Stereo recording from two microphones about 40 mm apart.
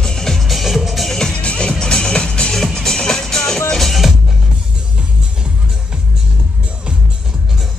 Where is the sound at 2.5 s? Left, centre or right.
Centre.